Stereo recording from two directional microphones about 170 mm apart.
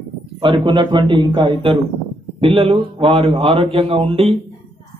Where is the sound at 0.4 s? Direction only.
30° right (ahead or behind).